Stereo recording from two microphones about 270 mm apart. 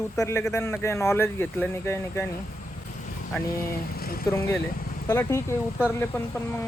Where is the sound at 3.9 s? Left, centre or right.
Left.